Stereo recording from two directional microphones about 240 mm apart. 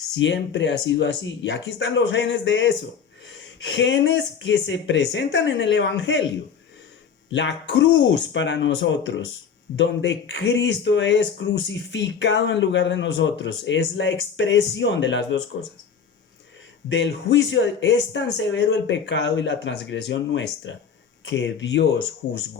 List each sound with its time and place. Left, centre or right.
0.1 s speech: left
7.3 s speech: left
16.9 s speech: left